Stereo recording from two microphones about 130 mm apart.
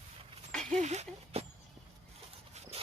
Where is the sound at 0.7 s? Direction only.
60° right (ahead or behind).